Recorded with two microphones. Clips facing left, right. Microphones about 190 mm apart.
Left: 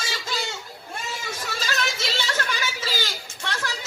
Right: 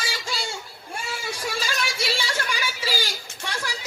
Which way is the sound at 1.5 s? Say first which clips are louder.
Even; 10° right (ahead or behind).